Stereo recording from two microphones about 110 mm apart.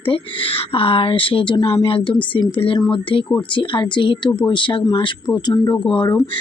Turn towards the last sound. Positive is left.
turn(degrees=45)  # may be behind; listen again after turning